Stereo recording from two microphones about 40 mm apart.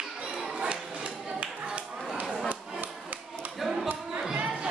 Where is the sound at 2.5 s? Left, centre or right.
Right.